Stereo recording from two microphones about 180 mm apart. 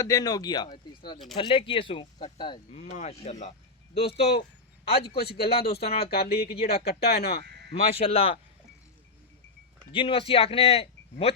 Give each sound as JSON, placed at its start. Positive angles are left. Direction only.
{"t": 0.0, "sound": "speech", "side_deg": 20}
{"t": 4.0, "sound": "speech", "side_deg": 65}
{"t": 7.4, "sound": "sheep", "side_deg": -70}
{"t": 7.7, "sound": "speech", "side_deg": 35}
{"t": 9.9, "sound": "speech", "side_deg": 30}